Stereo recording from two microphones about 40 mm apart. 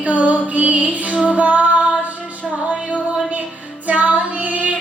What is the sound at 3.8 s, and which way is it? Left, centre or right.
Female singing, right.